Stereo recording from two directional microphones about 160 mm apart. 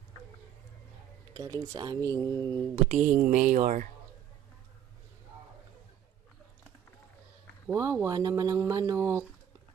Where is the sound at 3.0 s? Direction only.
55° right (ahead or behind).